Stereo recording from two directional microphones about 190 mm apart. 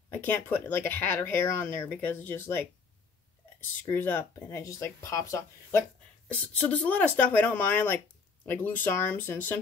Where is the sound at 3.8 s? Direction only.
10° left (ahead or behind).